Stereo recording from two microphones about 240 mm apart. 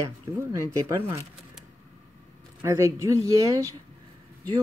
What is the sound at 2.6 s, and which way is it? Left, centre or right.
Speech, centre.